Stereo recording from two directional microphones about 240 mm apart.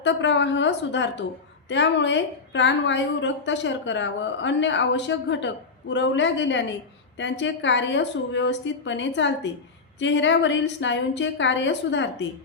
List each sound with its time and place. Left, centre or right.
0.0 s a woman's voice: left